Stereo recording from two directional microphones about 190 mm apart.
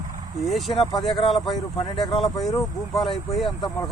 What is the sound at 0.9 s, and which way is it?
Speech, 20° left (ahead or behind).